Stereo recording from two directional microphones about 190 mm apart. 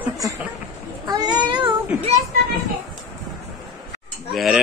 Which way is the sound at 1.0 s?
20° right (ahead or behind).